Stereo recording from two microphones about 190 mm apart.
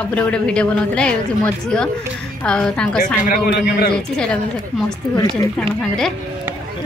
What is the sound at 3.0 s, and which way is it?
Speech, 45° left (ahead or behind).